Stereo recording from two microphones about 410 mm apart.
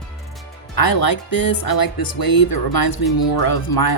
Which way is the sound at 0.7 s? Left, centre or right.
Left.